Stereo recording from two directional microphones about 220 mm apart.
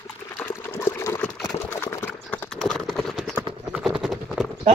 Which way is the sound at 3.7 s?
Centre (ahead or behind).